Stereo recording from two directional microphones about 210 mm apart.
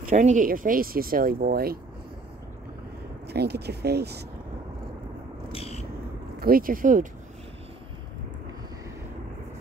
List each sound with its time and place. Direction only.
0.1 s speech: 35° right (ahead or behind)
3.3 s speech: 50° right (ahead or behind)
5.5 s vehicle: 30° left (ahead or behind)
6.4 s speech: 45° right (ahead or behind)